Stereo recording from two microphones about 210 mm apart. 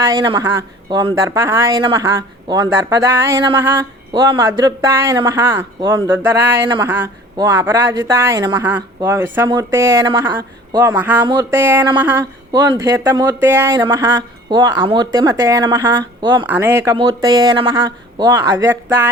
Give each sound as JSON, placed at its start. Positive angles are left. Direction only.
{"t": 0.0, "sound": "speech", "side_deg": -20}
{"t": 11.2, "sound": "speech", "side_deg": -20}
{"t": 11.9, "sound": "a sound", "side_deg": -10}
{"t": 12.5, "sound": "speech", "side_deg": -15}
{"t": 16.5, "sound": "speech", "side_deg": -10}
{"t": 16.9, "sound": "speech", "side_deg": -25}